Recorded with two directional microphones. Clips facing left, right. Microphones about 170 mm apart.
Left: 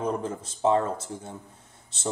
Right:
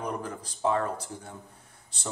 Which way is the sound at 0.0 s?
25° left (ahead or behind).